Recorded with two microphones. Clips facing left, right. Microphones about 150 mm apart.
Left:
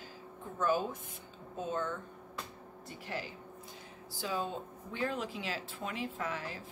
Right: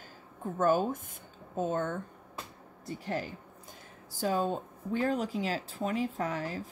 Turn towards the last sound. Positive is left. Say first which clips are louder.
# right 5 dB
turn(degrees=-40)  # may be behind; listen again after turning